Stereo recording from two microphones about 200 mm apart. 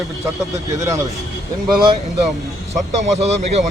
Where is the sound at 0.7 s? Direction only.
15° right (ahead or behind).